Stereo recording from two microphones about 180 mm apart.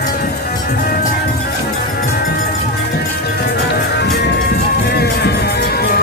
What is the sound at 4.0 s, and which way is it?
Music, 65° left (ahead or behind).